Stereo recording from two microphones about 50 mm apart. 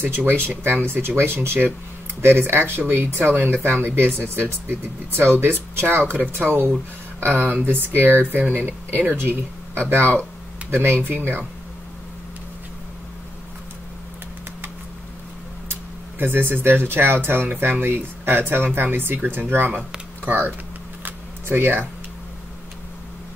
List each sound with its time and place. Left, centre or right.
0.0 s speech: right
15.7 s speech: right
21.0 s a sound: right